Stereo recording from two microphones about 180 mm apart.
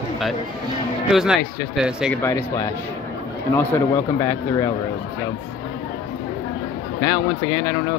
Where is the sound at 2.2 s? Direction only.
15° left (ahead or behind).